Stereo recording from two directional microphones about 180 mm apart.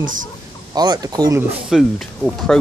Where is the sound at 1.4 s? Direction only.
Centre (ahead or behind).